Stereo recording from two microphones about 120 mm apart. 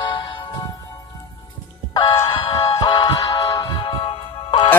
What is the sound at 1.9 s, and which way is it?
Music, 35° left (ahead or behind).